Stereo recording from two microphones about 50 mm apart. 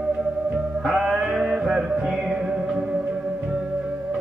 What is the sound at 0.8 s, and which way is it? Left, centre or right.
Music, centre.